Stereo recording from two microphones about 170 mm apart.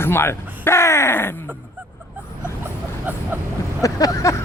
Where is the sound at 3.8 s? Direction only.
20° left (ahead or behind).